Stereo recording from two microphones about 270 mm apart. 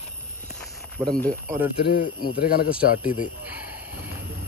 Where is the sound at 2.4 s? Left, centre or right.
Left.